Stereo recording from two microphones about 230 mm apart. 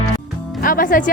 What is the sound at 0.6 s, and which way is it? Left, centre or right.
Music, left.